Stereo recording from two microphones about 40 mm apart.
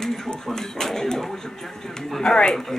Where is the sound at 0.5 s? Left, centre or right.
Centre.